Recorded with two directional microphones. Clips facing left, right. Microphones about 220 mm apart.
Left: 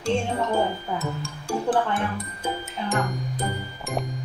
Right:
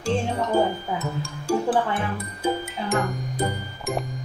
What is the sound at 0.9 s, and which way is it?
Speech, 5° right (ahead or behind).